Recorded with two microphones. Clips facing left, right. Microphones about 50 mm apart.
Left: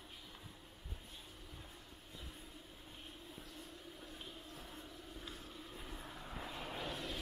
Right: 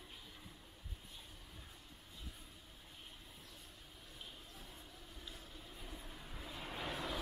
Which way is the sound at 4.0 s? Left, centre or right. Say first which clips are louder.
Left 4 dB; left.